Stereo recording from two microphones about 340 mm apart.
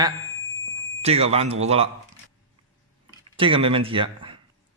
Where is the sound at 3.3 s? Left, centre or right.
Centre.